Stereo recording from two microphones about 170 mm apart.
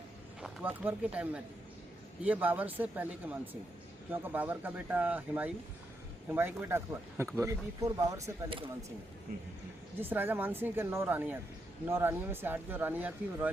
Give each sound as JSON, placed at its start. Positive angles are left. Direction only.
{"t": 0.4, "sound": "speech", "side_deg": -10}
{"t": 10.0, "sound": "speech", "side_deg": -10}